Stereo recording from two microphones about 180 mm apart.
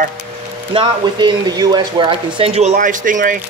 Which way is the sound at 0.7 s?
25° right (ahead or behind).